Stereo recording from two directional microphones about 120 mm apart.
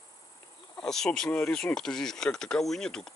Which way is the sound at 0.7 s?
5° left (ahead or behind).